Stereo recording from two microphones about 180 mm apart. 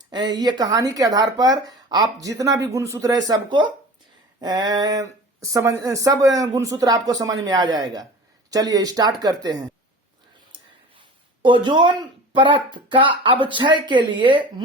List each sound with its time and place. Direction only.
0.0 s speech: 25° right (ahead or behind)
11.4 s speech: 25° right (ahead or behind)